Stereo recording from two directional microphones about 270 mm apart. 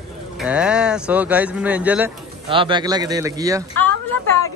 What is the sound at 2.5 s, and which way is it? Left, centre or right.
Speech, centre.